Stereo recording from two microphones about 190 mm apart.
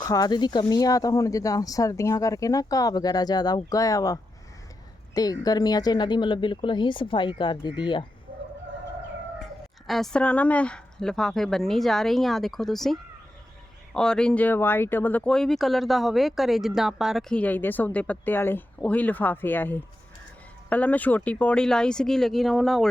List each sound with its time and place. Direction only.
0.0 s speech: 20° left (ahead or behind)
9.8 s a woman's voice: centre (ahead or behind)